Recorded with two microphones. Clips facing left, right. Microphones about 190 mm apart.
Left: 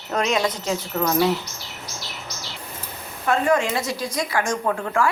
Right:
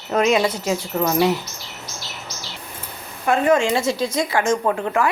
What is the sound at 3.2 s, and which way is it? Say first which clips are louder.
A woman's voice: right 3 dB; 20° right (ahead or behind).